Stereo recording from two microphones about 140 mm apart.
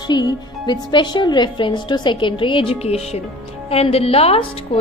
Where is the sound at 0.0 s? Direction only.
30° left (ahead or behind).